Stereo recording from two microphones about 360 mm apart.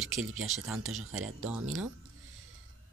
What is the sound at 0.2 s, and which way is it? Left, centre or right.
Speech, right.